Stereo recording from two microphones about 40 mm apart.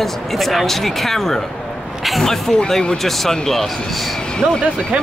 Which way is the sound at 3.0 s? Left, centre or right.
Centre.